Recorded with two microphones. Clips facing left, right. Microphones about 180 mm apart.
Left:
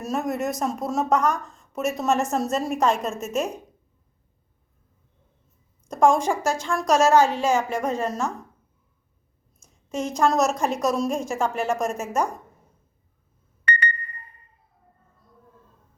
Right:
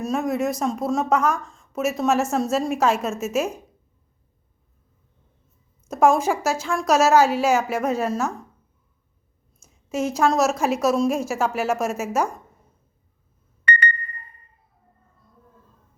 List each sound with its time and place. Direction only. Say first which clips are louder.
0.0 s speech: right 3 dB; centre (ahead or behind)
5.9 s speech: right 1 dB; 5° right (ahead or behind)
9.6 s speech: right 3 dB; 5° right (ahead or behind)
13.7 s a sound: right 3 dB; 65° right (ahead or behind)